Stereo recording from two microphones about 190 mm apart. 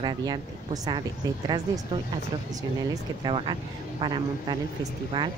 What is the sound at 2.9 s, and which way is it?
A woman's voice, 25° right (ahead or behind).